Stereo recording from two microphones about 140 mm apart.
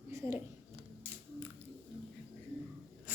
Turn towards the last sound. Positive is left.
turn(degrees=-10)  # may be behind; listen again after turning